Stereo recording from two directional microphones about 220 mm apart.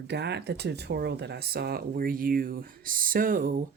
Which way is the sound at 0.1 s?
50° right (ahead or behind).